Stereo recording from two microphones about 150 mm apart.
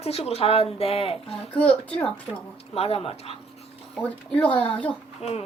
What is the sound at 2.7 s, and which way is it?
Speech, 40° left (ahead or behind).